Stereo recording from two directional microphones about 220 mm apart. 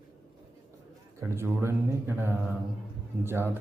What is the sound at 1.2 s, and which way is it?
Speech, 10° right (ahead or behind).